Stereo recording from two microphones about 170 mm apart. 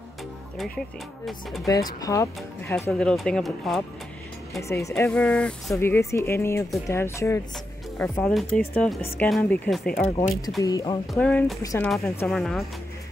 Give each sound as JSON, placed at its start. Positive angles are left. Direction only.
{"t": 0.6, "sound": "speech", "side_deg": 0}
{"t": 1.7, "sound": "speech", "side_deg": 20}
{"t": 4.6, "sound": "speech", "side_deg": 15}
{"t": 5.1, "sound": "speech", "side_deg": 5}
{"t": 8.0, "sound": "speech", "side_deg": 5}
{"t": 10.0, "sound": "speech", "side_deg": 40}
{"t": 10.6, "sound": "a woman's voice", "side_deg": 20}
{"t": 11.1, "sound": "speech", "side_deg": 10}
{"t": 11.6, "sound": "a woman's voice", "side_deg": 20}
{"t": 12.3, "sound": "speech", "side_deg": 0}